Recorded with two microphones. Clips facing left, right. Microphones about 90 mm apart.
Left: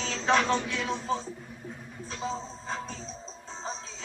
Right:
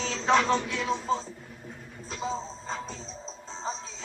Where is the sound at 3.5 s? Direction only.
30° right (ahead or behind).